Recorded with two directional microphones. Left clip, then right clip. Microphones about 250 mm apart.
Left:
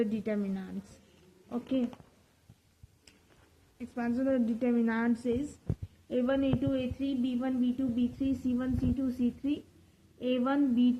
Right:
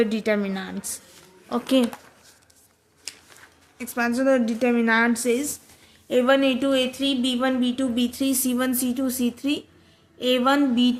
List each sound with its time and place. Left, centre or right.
0.0 s speech: centre
3.8 s speech: centre